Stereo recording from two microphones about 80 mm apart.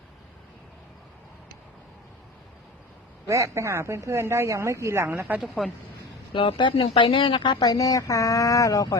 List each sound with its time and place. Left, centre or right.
3.2 s a woman's voice: right
5.3 s a woman's voice: right
6.3 s speech: left